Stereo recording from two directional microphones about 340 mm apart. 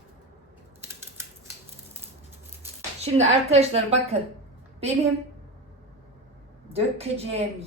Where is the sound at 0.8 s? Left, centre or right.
Centre.